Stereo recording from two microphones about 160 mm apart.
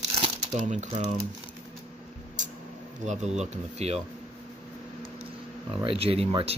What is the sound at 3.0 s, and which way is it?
Speech, 45° right (ahead or behind).